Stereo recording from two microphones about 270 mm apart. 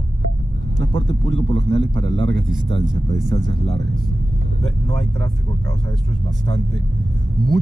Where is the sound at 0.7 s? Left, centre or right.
Left.